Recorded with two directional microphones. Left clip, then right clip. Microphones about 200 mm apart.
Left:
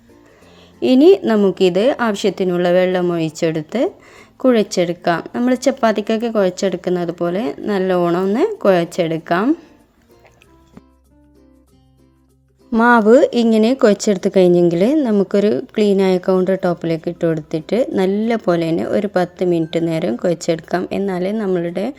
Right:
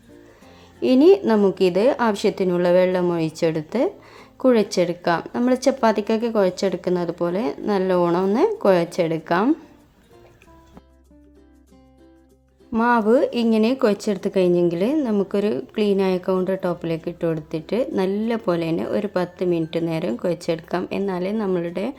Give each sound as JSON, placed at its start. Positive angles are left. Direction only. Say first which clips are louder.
{"t": 0.8, "sound": "a woman's voice", "louder": "left 4 dB", "side_deg": 20}
{"t": 12.7, "sound": "speech", "louder": "left 7 dB", "side_deg": 25}